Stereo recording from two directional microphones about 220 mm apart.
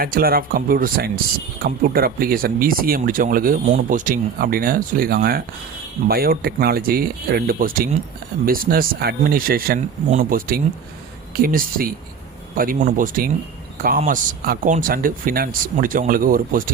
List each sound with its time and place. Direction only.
0.0 s speech: 40° right (ahead or behind)